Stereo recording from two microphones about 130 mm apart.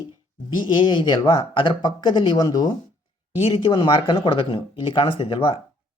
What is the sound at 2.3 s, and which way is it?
Speech, 30° left (ahead or behind).